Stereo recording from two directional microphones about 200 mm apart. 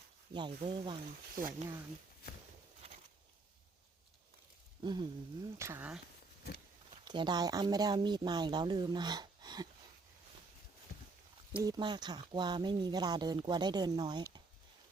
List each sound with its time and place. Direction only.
0.3 s speech: 25° right (ahead or behind)
1.4 s speech: 45° right (ahead or behind)
4.8 s speech: 20° right (ahead or behind)
6.9 s speech: 20° right (ahead or behind)
11.5 s speech: 15° right (ahead or behind)